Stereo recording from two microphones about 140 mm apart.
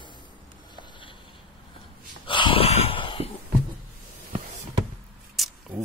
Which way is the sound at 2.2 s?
35° left (ahead or behind).